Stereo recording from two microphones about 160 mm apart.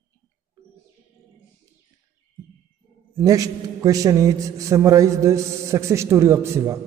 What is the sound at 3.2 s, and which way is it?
A man's voice, 20° right (ahead or behind).